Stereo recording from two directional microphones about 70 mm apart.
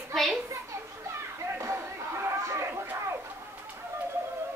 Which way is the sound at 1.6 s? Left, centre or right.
Right.